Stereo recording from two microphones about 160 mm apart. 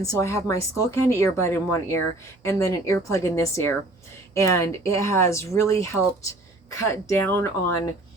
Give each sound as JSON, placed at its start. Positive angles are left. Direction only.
{"t": 0.0, "sound": "a woman's voice", "side_deg": 20}